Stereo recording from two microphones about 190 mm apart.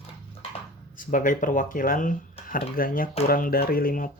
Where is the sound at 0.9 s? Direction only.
45° left (ahead or behind).